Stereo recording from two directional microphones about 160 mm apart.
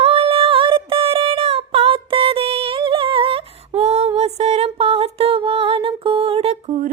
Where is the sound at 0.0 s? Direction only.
40° right (ahead or behind).